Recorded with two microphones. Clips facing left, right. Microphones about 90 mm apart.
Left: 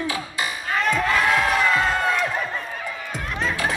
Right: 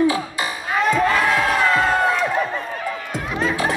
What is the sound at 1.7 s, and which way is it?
Crowd, centre (ahead or behind).